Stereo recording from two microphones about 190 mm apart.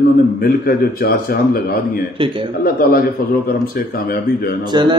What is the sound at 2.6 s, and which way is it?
A man's voice, 50° left (ahead or behind).